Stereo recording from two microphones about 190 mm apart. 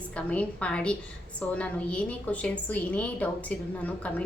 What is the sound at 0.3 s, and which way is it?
A woman's voice, 5° left (ahead or behind).